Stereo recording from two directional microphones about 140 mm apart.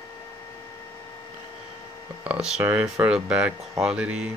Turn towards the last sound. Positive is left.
turn(degrees=-5)  # may be behind; listen again after turning